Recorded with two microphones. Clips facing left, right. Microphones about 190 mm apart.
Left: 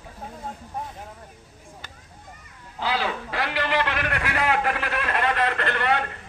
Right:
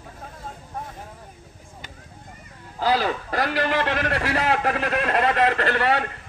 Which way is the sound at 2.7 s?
40° right (ahead or behind).